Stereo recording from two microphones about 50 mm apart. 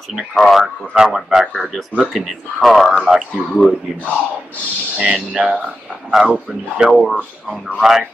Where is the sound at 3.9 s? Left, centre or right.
Centre.